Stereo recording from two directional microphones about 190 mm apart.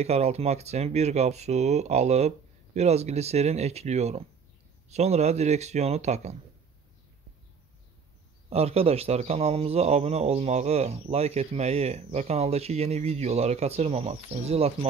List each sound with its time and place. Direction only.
0.0 s a man's voice: 35° right (ahead or behind)
8.5 s a man's voice: 30° right (ahead or behind)